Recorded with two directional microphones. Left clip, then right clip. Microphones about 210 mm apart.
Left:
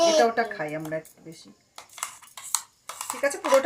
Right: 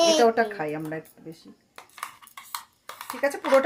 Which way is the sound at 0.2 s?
25° right (ahead or behind).